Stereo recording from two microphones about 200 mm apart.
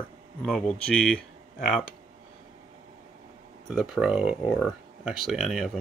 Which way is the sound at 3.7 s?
Centre (ahead or behind).